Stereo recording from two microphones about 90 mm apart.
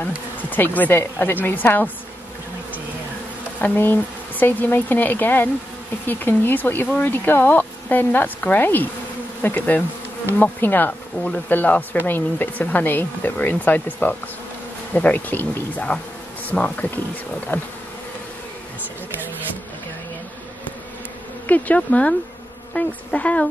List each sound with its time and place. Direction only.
0.0 s speech: 20° left (ahead or behind)
3.6 s speech: 20° left (ahead or behind)
21.5 s speech: 15° left (ahead or behind)